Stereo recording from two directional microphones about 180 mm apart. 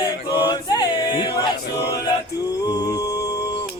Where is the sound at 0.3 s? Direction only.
20° left (ahead or behind).